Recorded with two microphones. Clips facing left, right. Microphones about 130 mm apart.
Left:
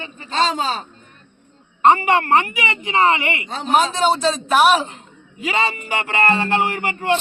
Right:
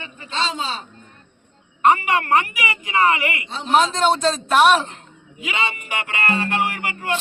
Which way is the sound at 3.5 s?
50° left (ahead or behind).